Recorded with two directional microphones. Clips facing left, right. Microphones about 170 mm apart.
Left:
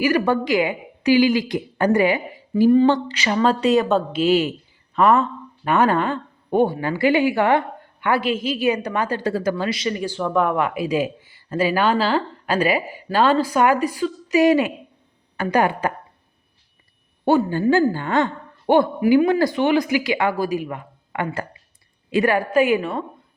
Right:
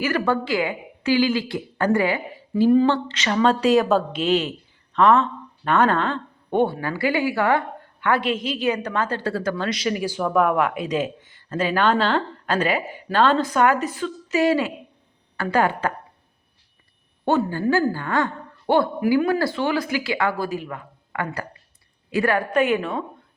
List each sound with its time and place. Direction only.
0.0 s a woman's voice: 15° left (ahead or behind)
6.8 s a woman's voice: 20° left (ahead or behind)
8.0 s a woman's voice: 5° left (ahead or behind)
17.3 s a woman's voice: 15° left (ahead or behind)